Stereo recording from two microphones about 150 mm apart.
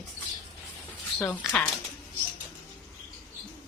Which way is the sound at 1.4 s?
5° left (ahead or behind).